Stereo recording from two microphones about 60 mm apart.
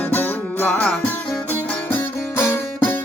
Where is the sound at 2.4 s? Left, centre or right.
Left.